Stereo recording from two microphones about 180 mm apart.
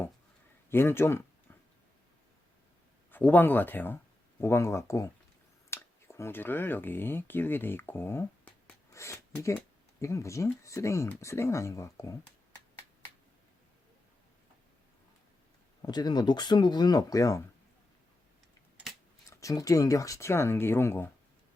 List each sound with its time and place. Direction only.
0.7 s speech: 15° left (ahead or behind)
3.1 s speech: 10° left (ahead or behind)
15.8 s speech: 20° left (ahead or behind)
19.3 s speech: 20° left (ahead or behind)